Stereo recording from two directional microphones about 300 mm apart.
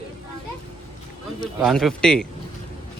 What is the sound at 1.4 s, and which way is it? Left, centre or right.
Speech, centre.